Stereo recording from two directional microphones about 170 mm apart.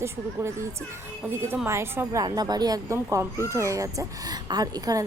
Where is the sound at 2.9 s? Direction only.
10° right (ahead or behind).